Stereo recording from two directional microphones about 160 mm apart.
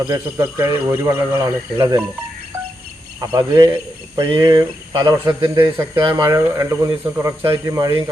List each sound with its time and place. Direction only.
0.1 s speech: 20° right (ahead or behind)
3.3 s speech: 25° right (ahead or behind)